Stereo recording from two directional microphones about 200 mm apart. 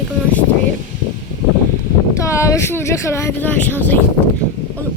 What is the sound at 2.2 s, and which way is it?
Speech, 15° left (ahead or behind).